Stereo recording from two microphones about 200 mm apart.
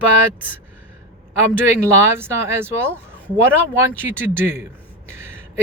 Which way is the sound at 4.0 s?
10° right (ahead or behind).